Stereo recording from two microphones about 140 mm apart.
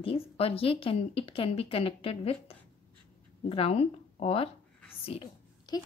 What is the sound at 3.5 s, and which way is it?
A woman's voice, 45° left (ahead or behind).